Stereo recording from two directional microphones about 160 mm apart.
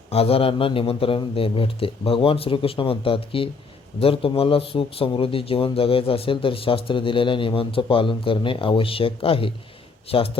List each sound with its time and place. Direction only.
0.1 s speech: 40° left (ahead or behind)